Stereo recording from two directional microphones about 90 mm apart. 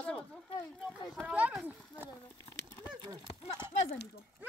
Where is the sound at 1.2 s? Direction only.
15° right (ahead or behind).